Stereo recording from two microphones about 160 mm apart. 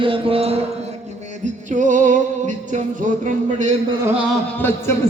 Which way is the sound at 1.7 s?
50° right (ahead or behind).